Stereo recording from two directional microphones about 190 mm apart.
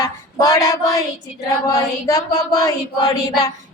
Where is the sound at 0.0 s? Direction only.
15° left (ahead or behind).